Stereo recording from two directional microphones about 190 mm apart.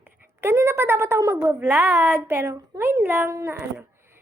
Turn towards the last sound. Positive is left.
turn(degrees=-10)  # may be behind; listen again after turning